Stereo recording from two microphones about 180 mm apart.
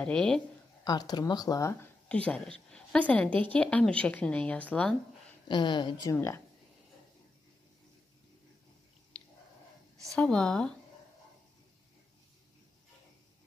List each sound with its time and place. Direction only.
0.0 s speech: 5° left (ahead or behind)
0.8 s a woman's voice: 20° left (ahead or behind)
5.5 s speech: 25° left (ahead or behind)
10.1 s speech: 5° left (ahead or behind)